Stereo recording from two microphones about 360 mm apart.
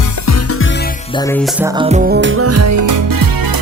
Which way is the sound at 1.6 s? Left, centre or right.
Centre.